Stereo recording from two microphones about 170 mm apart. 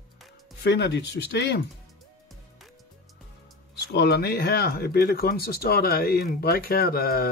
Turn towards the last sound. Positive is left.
turn(degrees=65)  # may be behind; listen again after turning